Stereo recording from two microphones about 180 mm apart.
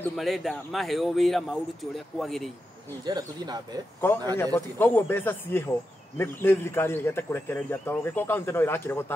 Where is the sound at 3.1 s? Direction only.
20° right (ahead or behind).